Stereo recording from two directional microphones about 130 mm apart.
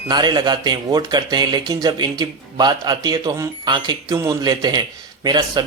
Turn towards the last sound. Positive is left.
turn(degrees=-35)  # may be behind; listen again after turning